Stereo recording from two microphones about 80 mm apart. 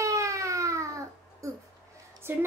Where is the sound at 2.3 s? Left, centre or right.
Right.